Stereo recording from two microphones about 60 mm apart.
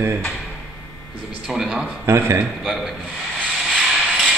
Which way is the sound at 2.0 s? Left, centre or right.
Right.